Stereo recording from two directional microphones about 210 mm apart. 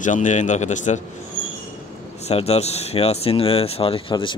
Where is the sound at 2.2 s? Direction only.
30° left (ahead or behind).